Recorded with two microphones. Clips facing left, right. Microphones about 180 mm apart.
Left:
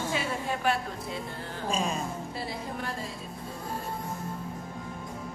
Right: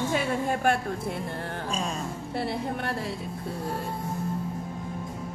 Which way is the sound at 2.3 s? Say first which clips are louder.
Right 6 dB; 65° right (ahead or behind).